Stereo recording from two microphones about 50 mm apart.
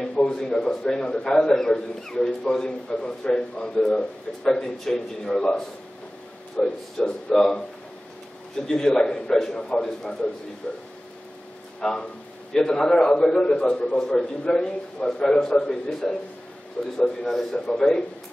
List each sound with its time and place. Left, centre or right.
0.1 s a man's voice: centre
11.8 s a man's voice: centre